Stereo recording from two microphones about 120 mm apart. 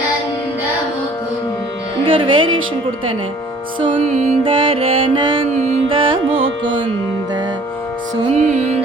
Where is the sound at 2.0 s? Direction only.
45° right (ahead or behind).